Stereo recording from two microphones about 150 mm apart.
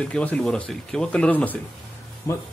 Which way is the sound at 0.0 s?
10° left (ahead or behind).